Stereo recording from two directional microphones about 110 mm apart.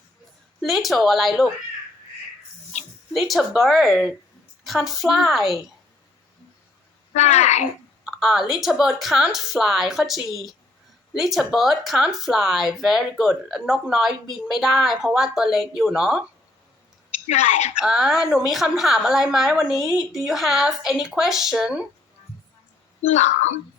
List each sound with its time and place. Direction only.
0.6 s speech: centre (ahead or behind)
3.1 s speech: centre (ahead or behind)
7.1 s speech: 90° left
8.0 s speech: 5° right (ahead or behind)
17.2 s speech: 90° left
17.7 s speech: 5° right (ahead or behind)
23.0 s speech: 90° left